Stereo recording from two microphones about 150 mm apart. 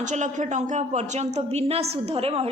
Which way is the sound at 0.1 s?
55° right (ahead or behind).